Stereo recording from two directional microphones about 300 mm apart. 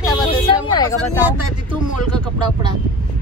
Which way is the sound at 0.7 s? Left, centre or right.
Centre.